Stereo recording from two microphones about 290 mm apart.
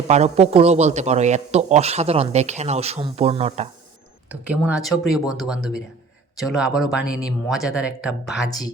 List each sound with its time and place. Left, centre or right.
0.1 s a man's voice: right
4.3 s speech: centre
8.4 s speech: centre